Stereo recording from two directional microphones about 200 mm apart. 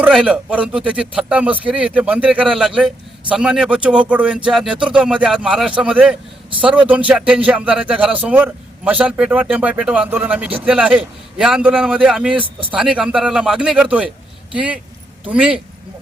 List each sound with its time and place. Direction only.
0.0 s a man's voice: 5° right (ahead or behind)
12.4 s speech: 25° right (ahead or behind)
12.7 s a man's voice: 5° right (ahead or behind)